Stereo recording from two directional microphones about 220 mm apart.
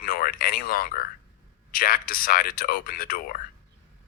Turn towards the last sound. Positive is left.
turn(degrees=40)  # may be behind; listen again after turning